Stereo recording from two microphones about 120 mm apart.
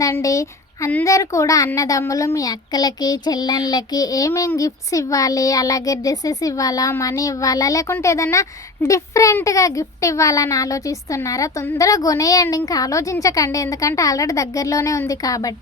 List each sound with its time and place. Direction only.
0.0 s child singing: 30° left (ahead or behind)
1.0 s a child's voice: 25° left (ahead or behind)